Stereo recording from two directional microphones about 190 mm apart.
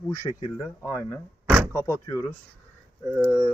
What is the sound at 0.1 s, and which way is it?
Speech, 15° left (ahead or behind).